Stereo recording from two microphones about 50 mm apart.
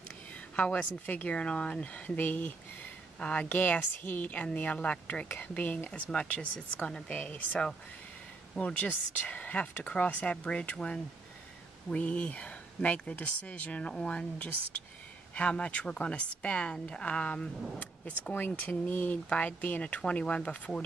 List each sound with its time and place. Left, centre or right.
0.6 s a woman's voice: left
5.9 s a woman's voice: left
17.0 s a woman's voice: left
18.3 s a woman's voice: left